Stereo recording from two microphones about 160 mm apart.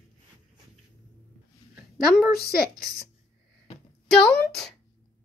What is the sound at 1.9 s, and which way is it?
Speech, centre (ahead or behind).